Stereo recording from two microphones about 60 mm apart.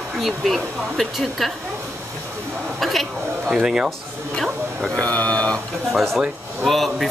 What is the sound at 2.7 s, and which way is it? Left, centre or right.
Speech, centre.